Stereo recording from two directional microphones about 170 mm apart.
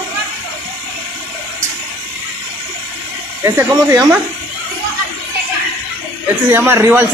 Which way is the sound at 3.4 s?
20° right (ahead or behind).